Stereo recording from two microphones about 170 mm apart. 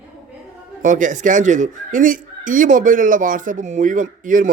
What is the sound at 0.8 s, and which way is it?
Speech, 50° right (ahead or behind).